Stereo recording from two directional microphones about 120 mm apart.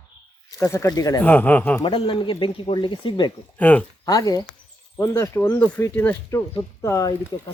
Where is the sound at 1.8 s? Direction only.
45° left (ahead or behind).